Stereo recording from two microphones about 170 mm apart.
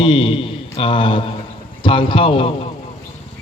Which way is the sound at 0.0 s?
30° left (ahead or behind).